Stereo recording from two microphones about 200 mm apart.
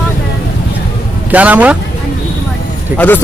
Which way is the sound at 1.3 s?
5° right (ahead or behind).